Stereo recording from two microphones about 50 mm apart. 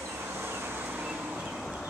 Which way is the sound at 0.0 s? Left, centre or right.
Right.